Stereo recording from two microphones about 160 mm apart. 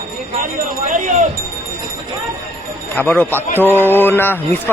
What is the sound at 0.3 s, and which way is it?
Speech, 55° right (ahead or behind).